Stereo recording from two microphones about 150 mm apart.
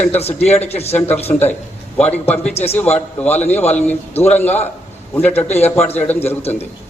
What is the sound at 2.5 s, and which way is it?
Speech, 45° left (ahead or behind).